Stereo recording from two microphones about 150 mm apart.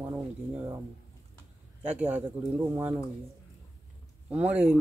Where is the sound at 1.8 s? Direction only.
10° right (ahead or behind).